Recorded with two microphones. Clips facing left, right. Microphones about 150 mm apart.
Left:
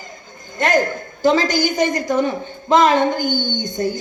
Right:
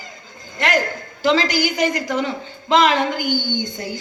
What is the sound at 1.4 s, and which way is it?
Speech, 20° left (ahead or behind).